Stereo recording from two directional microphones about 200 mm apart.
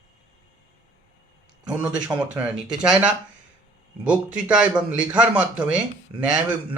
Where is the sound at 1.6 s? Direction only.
5° right (ahead or behind).